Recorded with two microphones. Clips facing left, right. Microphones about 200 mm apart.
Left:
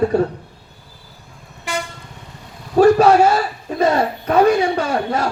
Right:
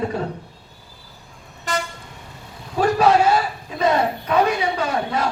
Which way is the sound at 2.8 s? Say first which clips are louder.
Left 7 dB; 45° left (ahead or behind).